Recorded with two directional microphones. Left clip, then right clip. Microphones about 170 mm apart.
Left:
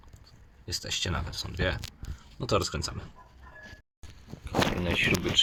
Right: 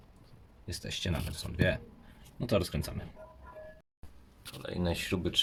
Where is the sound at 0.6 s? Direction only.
5° right (ahead or behind).